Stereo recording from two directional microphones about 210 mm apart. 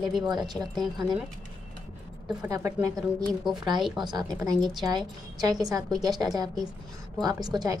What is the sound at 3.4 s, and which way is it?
Speech, centre (ahead or behind).